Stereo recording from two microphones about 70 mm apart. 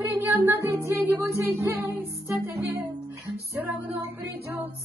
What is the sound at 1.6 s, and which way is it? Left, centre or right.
Music, right.